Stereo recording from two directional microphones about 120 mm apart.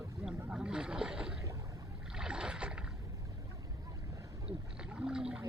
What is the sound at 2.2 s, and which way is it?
Rowboat, 10° right (ahead or behind).